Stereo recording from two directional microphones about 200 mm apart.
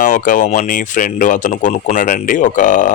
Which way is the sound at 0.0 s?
40° left (ahead or behind).